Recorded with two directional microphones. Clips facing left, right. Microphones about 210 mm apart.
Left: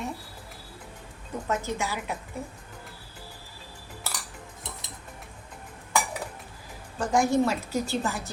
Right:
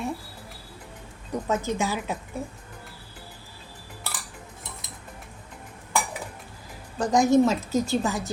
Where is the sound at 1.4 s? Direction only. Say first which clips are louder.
Right 3 dB; 20° right (ahead or behind).